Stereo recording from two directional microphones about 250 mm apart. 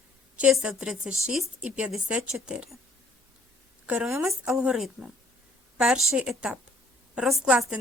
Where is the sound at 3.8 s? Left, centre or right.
Centre.